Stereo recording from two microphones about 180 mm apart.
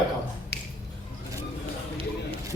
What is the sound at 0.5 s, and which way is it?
Finger snapping, 65° left (ahead or behind).